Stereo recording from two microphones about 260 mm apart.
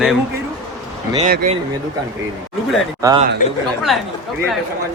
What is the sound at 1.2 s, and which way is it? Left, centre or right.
Speech, right.